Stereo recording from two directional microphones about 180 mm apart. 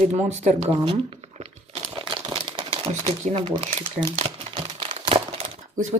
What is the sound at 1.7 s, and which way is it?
Crumpling, 30° right (ahead or behind).